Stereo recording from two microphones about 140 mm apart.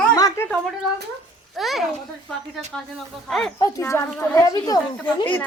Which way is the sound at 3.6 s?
20° left (ahead or behind).